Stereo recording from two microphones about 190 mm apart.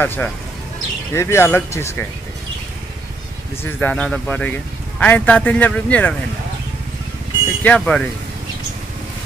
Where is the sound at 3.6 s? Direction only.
10° left (ahead or behind).